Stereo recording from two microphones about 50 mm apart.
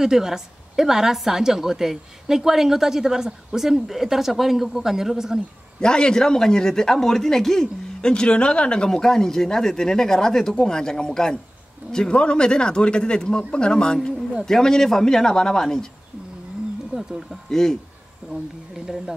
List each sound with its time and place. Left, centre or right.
0.0 s a woman's voice: centre
5.8 s speech: centre
16.9 s speech: centre
17.5 s speech: centre
18.2 s a woman's voice: centre